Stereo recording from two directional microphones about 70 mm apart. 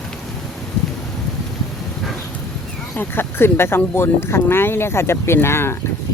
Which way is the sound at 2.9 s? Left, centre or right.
Left.